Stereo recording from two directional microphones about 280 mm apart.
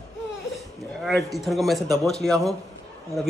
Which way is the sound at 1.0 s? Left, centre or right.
Centre.